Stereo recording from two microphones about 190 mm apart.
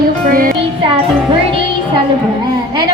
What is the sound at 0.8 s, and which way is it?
Speech, 25° right (ahead or behind).